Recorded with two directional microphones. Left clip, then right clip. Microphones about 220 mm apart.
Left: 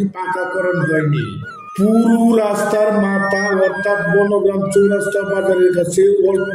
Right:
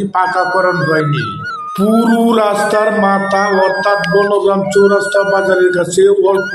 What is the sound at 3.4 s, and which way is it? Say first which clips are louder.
Music: right 3 dB; 40° right (ahead or behind).